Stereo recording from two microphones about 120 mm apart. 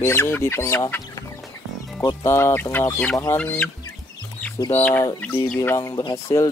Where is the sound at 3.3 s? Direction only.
15° left (ahead or behind).